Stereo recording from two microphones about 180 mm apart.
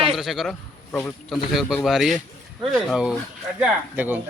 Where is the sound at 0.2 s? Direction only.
Centre (ahead or behind).